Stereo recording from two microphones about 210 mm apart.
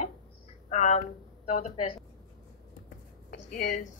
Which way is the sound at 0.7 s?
30° left (ahead or behind).